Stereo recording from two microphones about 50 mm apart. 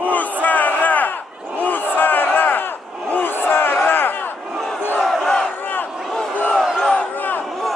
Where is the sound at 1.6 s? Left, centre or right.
Left.